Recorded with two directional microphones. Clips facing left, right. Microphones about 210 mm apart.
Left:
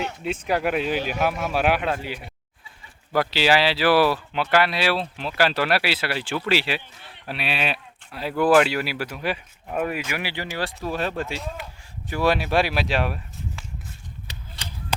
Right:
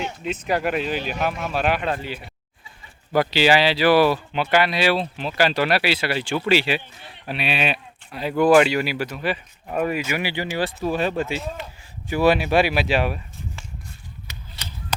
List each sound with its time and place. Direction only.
0.2 s speech: 10° left (ahead or behind)
14.3 s chop: 30° left (ahead or behind)